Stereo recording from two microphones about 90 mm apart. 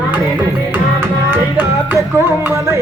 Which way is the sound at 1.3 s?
20° right (ahead or behind).